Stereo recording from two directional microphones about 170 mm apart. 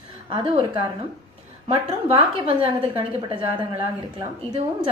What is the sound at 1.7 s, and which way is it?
A woman's voice, 35° right (ahead or behind).